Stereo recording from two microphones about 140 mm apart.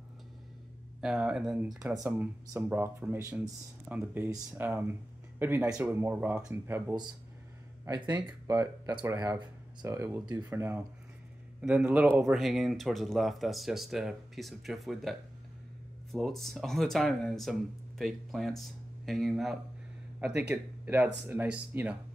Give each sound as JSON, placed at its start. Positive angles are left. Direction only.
{"t": 1.0, "sound": "speech", "side_deg": -5}
{"t": 7.8, "sound": "speech", "side_deg": -30}
{"t": 20.2, "sound": "speech", "side_deg": -10}